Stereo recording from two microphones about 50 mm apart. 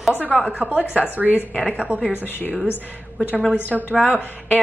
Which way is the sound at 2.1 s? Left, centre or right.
Left.